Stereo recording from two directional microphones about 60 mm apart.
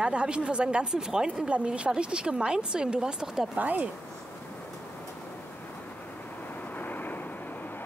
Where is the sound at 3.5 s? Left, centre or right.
Right.